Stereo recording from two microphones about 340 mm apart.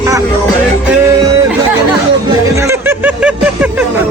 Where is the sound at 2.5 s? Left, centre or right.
Centre.